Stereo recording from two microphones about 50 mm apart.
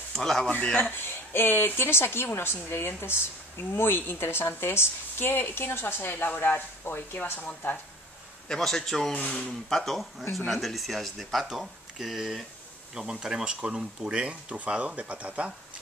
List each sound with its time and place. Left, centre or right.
0.1 s speech: centre
0.7 s speech: left
6.1 s speech: left
7.3 s speech: left
8.5 s a man's voice: centre
9.1 s speech: left
9.5 s speech: centre; by 15.5 s right